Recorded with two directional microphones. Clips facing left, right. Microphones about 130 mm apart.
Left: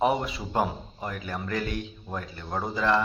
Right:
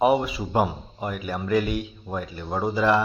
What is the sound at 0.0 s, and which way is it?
Speech, 5° right (ahead or behind).